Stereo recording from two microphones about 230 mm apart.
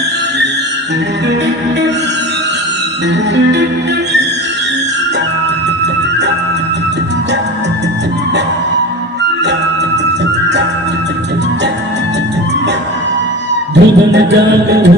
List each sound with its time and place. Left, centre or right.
3.3 s music: right
13.7 s music: right